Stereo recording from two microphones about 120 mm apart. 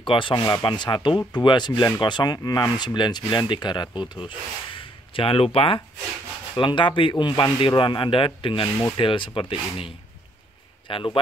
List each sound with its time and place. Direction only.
0.0 s speech: 45° left (ahead or behind)
4.7 s a sound: 50° left (ahead or behind)
6.5 s speech: 40° left (ahead or behind)